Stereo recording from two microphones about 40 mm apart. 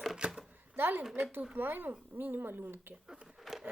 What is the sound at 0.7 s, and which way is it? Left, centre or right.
A woman's voice, right.